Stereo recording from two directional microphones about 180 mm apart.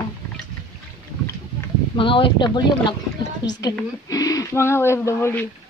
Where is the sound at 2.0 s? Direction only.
30° left (ahead or behind); by 5.5 s 15° left (ahead or behind).